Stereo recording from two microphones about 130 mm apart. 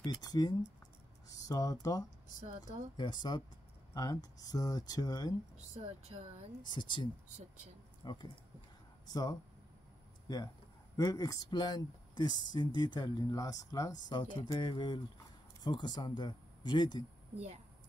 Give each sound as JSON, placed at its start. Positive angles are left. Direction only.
{"t": 0.0, "sound": "speech", "side_deg": 30}
{"t": 5.8, "sound": "speech", "side_deg": -50}
{"t": 6.6, "sound": "speech", "side_deg": 35}